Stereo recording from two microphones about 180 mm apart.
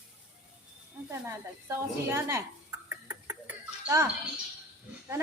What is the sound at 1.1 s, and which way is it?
A woman's voice, 15° right (ahead or behind).